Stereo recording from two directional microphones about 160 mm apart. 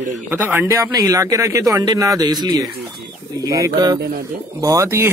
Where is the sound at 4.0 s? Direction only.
80° right.